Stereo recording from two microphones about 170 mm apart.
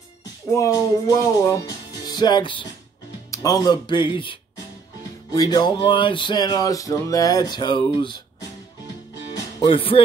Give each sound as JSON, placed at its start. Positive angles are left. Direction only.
{"t": 0.6, "sound": "music", "side_deg": 20}
{"t": 9.3, "sound": "music", "side_deg": 30}